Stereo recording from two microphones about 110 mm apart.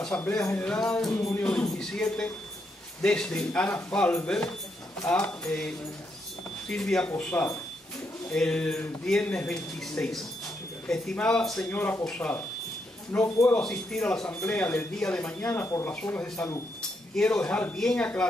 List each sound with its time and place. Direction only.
0.0 s speech: 10° left (ahead or behind)
6.7 s speech: 5° left (ahead or behind)
17.1 s speech: 5° left (ahead or behind)